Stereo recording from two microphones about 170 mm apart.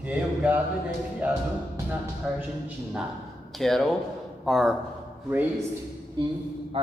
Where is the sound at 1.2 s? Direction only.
10° right (ahead or behind).